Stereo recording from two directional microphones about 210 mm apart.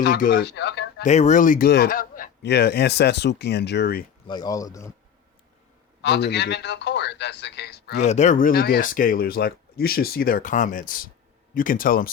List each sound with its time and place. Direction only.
0.0 s speech: 50° left (ahead or behind)
1.0 s speech: 35° left (ahead or behind); by 4.0 s 50° left (ahead or behind)
4.3 s speech: 20° left (ahead or behind)
6.0 s a man's voice: 55° left (ahead or behind)
7.9 s speech: 35° left (ahead or behind)